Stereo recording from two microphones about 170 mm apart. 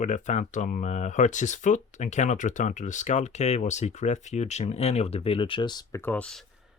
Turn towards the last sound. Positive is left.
turn(degrees=5)  # may be behind; listen again after turning